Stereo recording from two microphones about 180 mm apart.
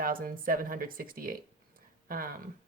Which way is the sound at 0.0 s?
50° right (ahead or behind).